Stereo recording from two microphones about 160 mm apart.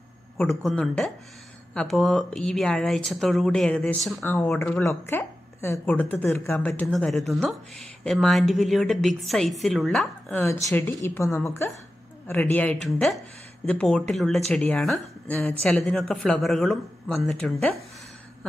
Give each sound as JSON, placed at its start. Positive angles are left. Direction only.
{"t": 0.4, "sound": "speech", "side_deg": 0}
{"t": 4.2, "sound": "a woman's voice", "side_deg": 15}
{"t": 6.9, "sound": "speech", "side_deg": 0}
{"t": 10.3, "sound": "a woman's voice", "side_deg": 15}